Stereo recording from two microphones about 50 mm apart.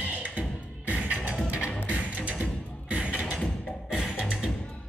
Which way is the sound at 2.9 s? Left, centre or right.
Right.